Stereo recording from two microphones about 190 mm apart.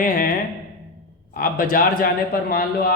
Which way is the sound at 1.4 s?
50° left (ahead or behind).